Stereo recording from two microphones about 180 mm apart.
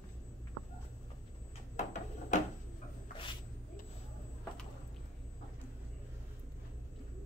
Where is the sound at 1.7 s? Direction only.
40° left (ahead or behind).